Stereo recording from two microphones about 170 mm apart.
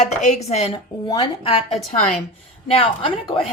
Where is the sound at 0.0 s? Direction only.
45° left (ahead or behind).